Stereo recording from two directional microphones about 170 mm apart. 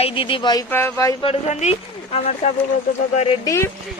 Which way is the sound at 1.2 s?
40° left (ahead or behind).